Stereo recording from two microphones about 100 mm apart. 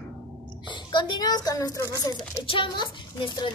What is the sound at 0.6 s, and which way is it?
A child's voice, 50° left (ahead or behind).